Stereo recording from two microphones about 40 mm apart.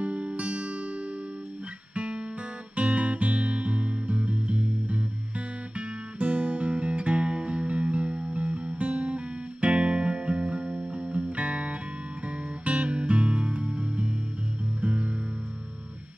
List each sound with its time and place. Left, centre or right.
0.0 s music: right
2.0 s guitar: right
2.7 s music: right